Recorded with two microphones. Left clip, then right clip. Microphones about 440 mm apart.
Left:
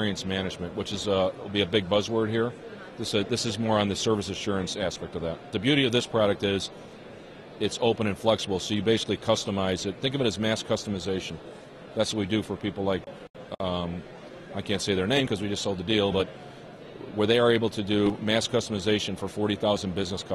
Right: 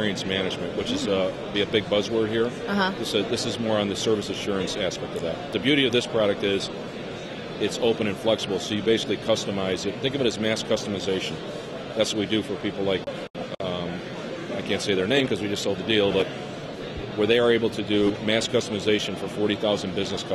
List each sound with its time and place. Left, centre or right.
0.0 s speech: left
7.6 s speech: left
14.7 s speech: left